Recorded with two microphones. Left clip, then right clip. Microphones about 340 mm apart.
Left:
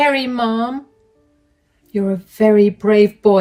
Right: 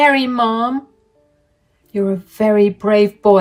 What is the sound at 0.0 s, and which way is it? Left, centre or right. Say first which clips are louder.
Speech: right 3 dB; right.